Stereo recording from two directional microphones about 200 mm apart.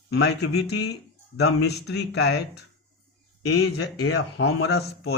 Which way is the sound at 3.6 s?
75° left (ahead or behind).